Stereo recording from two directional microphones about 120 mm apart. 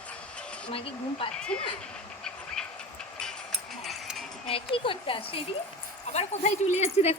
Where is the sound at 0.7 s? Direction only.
50° left (ahead or behind).